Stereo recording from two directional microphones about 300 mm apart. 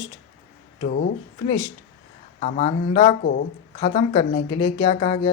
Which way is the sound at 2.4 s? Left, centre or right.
Left.